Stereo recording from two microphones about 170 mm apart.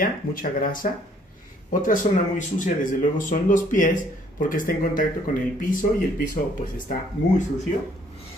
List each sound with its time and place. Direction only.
0.0 s speech: 55° left (ahead or behind)
1.7 s speech: 50° left (ahead or behind)